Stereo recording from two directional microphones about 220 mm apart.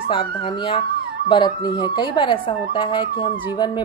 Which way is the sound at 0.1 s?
25° left (ahead or behind).